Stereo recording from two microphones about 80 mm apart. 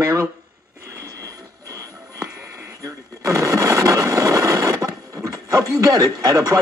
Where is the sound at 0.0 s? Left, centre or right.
Right.